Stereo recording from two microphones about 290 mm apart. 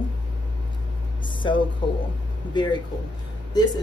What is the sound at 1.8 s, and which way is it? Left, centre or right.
Speech, centre.